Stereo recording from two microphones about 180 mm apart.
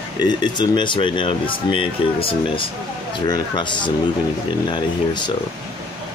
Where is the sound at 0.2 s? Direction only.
25° left (ahead or behind).